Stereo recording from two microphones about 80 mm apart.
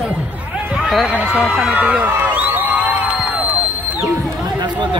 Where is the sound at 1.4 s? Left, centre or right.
Centre.